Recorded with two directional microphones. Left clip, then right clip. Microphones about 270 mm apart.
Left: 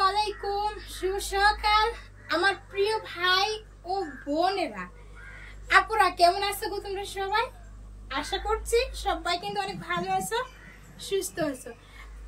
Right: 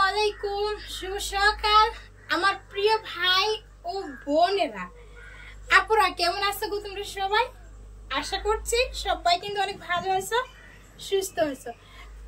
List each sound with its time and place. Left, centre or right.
0.0 s child singing: centre
4.3 s a woman's voice: centre